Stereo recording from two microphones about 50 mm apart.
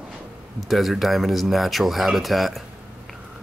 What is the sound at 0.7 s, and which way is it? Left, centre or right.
Speech, centre.